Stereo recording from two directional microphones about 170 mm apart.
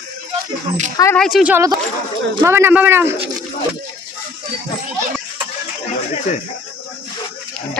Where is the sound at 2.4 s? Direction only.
15° right (ahead or behind).